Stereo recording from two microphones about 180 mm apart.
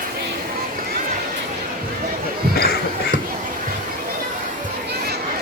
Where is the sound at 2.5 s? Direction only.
60° left (ahead or behind).